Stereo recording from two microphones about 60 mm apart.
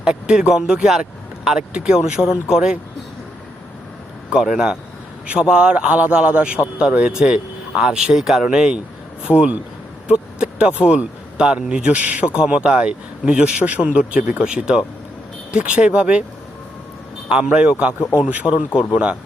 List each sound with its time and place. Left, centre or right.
0.0 s a man's voice: centre
4.3 s a man's voice: centre
10.1 s a sound: centre
10.8 s a man's voice: centre
17.2 s a man's voice: centre
18.7 s speech: left